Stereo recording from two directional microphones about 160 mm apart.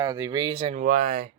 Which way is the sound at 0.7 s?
55° right (ahead or behind).